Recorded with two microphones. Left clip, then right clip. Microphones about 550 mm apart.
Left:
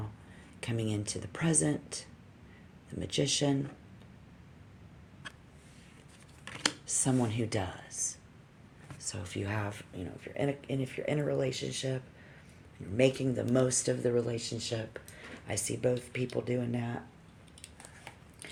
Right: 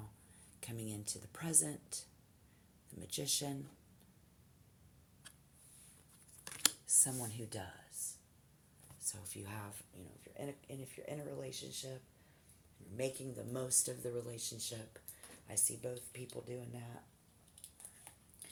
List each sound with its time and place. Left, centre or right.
0.6 s speech: right
6.8 s speech: right
9.0 s speech: right
13.0 s speech: right